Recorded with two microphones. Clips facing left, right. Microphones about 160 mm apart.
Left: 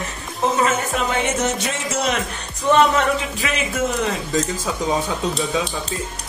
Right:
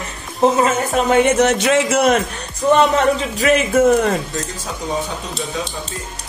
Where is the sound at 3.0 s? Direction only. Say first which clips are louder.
Right 4 dB; 40° right (ahead or behind).